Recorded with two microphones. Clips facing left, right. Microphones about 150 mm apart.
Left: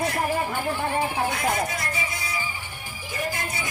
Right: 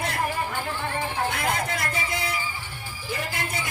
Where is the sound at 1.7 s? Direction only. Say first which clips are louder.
Right 1 dB; 55° right (ahead or behind).